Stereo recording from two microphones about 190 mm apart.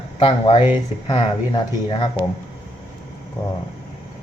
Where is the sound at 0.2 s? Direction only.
25° left (ahead or behind).